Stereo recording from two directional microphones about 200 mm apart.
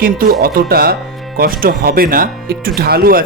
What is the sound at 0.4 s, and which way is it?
Speech, 50° right (ahead or behind).